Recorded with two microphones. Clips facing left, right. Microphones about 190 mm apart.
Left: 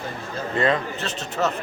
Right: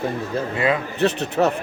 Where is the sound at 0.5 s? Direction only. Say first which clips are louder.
Left 1 dB; 10° right (ahead or behind).